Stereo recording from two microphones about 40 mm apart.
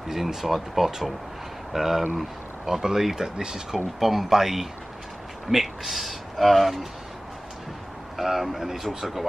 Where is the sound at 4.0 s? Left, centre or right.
Centre.